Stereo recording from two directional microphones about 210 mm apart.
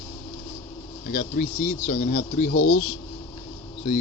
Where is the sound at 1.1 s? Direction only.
35° left (ahead or behind).